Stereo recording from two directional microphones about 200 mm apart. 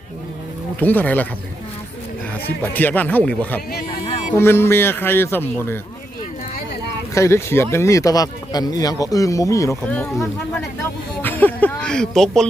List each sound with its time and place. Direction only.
0.8 s speech: 10° left (ahead or behind)
2.7 s speech: 10° left (ahead or behind)
4.0 s a sound: 30° left (ahead or behind)
4.4 s speech: 10° left (ahead or behind)
7.1 s speech: 15° left (ahead or behind)